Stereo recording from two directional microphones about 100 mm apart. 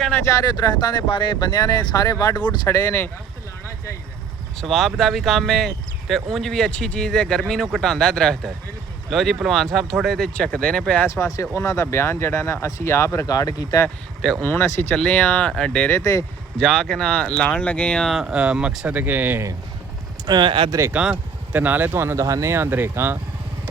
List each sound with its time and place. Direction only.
0.3 s speech: 35° left (ahead or behind)
1.0 s speech: 55° left (ahead or behind)
2.6 s speech: 25° left (ahead or behind)
4.6 s speech: centre (ahead or behind)
11.1 s speech: 30° left (ahead or behind)
14.4 s speech: 20° left (ahead or behind)
14.9 s speech: 10° left (ahead or behind)
15.9 s speech: 30° left (ahead or behind)
16.6 s speech: 5° left (ahead or behind)
18.1 s speech: 5° right (ahead or behind)
20.2 s speech: 45° right (ahead or behind)
20.7 s speech: 30° right (ahead or behind)
20.9 s speech: 10° right (ahead or behind)